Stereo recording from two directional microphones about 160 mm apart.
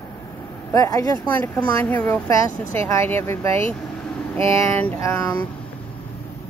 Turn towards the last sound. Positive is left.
turn(degrees=20)  # may be behind; listen again after turning